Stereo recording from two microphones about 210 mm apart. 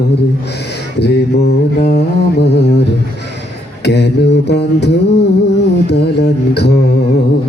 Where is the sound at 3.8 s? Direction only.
50° left (ahead or behind).